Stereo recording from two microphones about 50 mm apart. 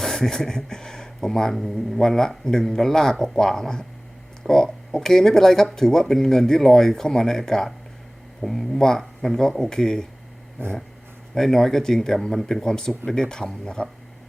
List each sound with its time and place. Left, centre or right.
0.0 s speech: centre
10.6 s dog: right
11.3 s speech: centre